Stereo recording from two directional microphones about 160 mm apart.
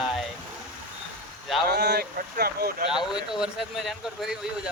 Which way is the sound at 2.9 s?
5° right (ahead or behind).